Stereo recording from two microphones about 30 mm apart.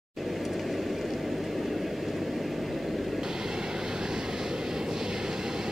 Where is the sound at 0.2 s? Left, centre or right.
Centre.